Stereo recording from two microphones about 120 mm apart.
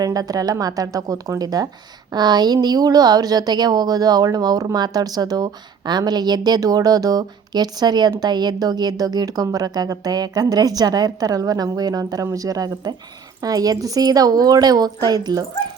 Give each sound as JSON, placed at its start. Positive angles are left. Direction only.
{"t": 0.0, "sound": "speech", "side_deg": -30}